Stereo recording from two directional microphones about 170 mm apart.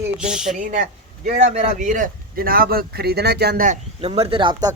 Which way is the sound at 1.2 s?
45° right (ahead or behind).